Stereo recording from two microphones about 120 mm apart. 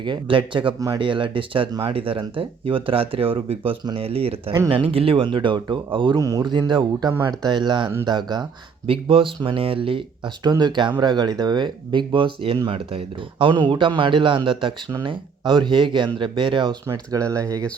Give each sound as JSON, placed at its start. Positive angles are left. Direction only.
{"t": 0.0, "sound": "speech", "side_deg": -45}
{"t": 8.9, "sound": "speech", "side_deg": -50}
{"t": 16.8, "sound": "speech", "side_deg": -25}